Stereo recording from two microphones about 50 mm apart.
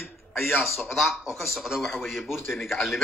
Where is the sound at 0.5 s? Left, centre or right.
Left.